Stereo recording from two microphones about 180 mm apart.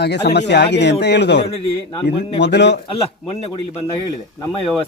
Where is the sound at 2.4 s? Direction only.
70° left (ahead or behind).